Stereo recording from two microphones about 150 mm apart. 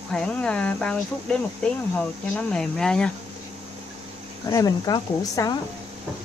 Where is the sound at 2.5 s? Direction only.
5° left (ahead or behind).